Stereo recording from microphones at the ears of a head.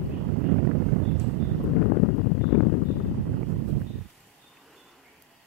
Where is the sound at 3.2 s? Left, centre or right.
Right.